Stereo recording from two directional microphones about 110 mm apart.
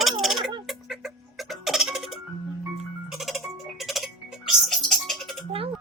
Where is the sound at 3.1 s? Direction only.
Centre (ahead or behind).